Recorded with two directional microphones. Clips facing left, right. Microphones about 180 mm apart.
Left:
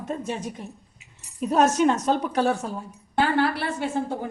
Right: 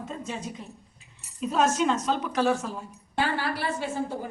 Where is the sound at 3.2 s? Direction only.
60° left (ahead or behind).